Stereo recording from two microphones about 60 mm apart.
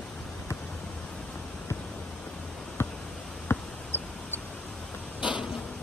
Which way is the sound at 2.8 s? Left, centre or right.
Left.